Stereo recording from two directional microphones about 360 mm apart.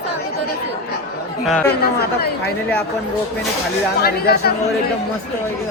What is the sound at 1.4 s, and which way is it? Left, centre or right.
Speech, centre.